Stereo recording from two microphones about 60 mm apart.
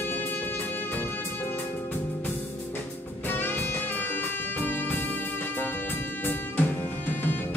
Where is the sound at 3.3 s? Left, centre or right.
Left.